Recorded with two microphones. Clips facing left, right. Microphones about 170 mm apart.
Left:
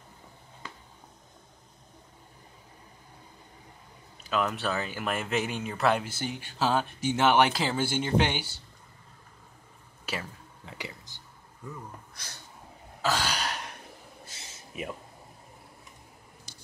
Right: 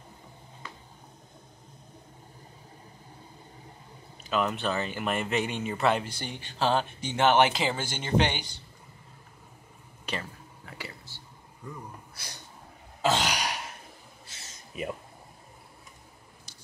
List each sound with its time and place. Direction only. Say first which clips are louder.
4.2 s speech: right 1 dB; centre (ahead or behind)
10.1 s speech: even; 5° left (ahead or behind)
10.6 s whispering: left 1 dB; 20° left (ahead or behind)
11.7 s speech: right 1 dB; 10° right (ahead or behind)
13.0 s throat clearing: right 2 dB; 20° right (ahead or behind)
14.7 s speech: right 2 dB; centre (ahead or behind)